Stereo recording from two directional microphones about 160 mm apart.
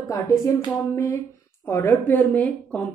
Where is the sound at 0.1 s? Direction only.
20° left (ahead or behind).